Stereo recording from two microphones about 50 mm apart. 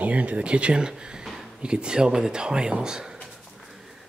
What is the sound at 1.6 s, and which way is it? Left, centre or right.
Speech, centre.